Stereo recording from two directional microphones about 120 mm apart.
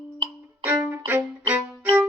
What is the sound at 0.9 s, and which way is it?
Violin, 15° right (ahead or behind).